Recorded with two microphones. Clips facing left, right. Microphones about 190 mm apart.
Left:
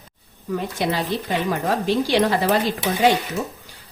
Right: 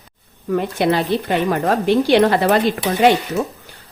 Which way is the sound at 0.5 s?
60° right (ahead or behind).